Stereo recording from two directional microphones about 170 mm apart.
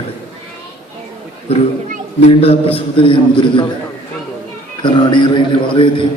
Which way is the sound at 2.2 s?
35° left (ahead or behind).